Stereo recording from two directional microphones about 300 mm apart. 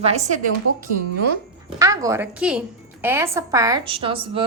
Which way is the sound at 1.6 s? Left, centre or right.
Centre.